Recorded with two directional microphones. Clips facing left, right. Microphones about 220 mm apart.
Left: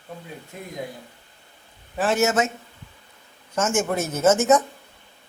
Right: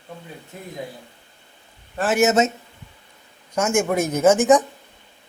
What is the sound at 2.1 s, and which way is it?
Speech, 20° right (ahead or behind).